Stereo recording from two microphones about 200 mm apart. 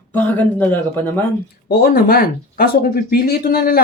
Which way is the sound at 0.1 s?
10° left (ahead or behind).